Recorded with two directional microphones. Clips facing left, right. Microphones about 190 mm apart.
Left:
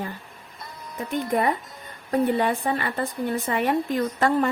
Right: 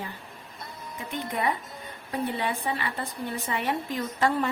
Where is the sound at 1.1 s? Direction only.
45° left (ahead or behind).